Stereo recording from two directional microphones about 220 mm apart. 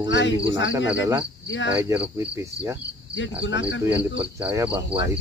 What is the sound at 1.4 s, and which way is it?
Cricket, 60° left (ahead or behind).